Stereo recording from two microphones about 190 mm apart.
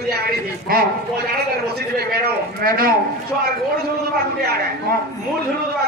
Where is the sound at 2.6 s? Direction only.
50° right (ahead or behind).